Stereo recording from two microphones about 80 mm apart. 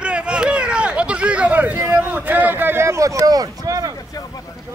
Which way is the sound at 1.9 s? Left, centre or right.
Right.